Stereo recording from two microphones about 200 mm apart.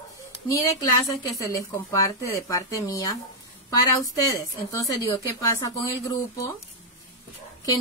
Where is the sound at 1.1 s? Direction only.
15° left (ahead or behind).